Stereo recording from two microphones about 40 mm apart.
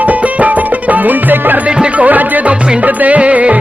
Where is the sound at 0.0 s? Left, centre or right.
Right.